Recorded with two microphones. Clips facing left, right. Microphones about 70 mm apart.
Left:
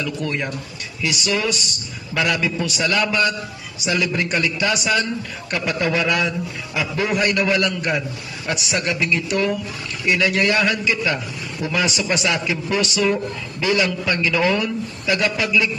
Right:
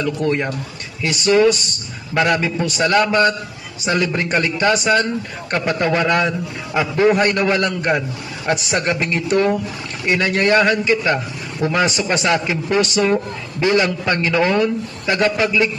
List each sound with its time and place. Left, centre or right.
0.0 s a man's voice: right